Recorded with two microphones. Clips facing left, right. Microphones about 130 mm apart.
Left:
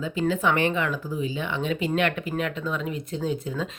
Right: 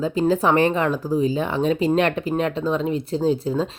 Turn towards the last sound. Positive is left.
turn(degrees=-30)  # may be behind; listen again after turning